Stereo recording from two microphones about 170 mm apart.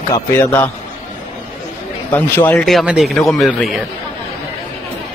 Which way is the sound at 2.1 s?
10° left (ahead or behind).